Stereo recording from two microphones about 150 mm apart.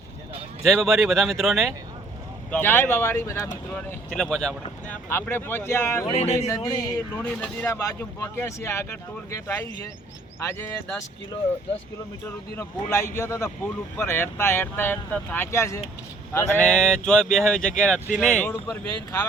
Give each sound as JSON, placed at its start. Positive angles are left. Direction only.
{"t": 0.6, "sound": "speech", "side_deg": 0}
{"t": 2.5, "sound": "speech", "side_deg": 15}
{"t": 3.8, "sound": "speech", "side_deg": 5}
{"t": 6.1, "sound": "speech", "side_deg": 45}
{"t": 6.5, "sound": "speech", "side_deg": 25}
{"t": 7.3, "sound": "speech", "side_deg": 10}
{"t": 7.7, "sound": "speech", "side_deg": 20}
{"t": 12.5, "sound": "speech", "side_deg": 20}